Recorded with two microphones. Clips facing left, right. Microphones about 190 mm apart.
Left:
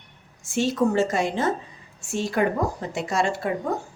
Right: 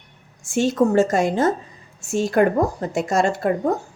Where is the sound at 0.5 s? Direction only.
45° right (ahead or behind).